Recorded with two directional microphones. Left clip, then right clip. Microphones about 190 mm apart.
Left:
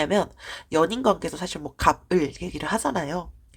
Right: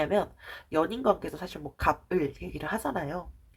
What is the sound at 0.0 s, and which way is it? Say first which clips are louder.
Speech: left 4 dB; 40° left (ahead or behind).